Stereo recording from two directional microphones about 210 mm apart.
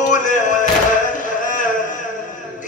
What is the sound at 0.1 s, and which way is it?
Music, 35° left (ahead or behind).